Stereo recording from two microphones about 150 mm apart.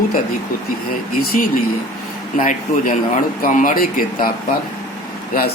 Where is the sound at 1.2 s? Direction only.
65° left (ahead or behind).